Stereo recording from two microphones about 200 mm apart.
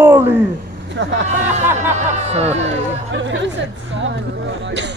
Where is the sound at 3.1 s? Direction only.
65° right (ahead or behind).